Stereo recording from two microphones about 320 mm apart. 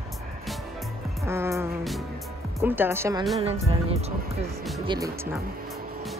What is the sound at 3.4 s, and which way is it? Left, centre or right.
Music, centre.